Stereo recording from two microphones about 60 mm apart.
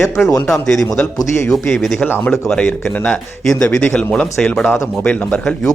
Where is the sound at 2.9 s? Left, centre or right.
Left.